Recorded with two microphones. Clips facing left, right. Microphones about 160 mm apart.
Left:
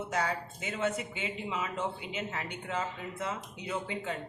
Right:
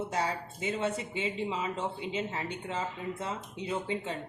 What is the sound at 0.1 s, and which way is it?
Speech, 30° right (ahead or behind).